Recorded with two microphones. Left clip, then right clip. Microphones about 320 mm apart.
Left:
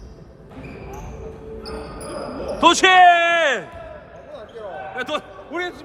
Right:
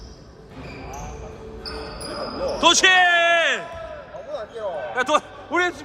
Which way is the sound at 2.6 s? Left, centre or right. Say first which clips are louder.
Left 4 dB; centre.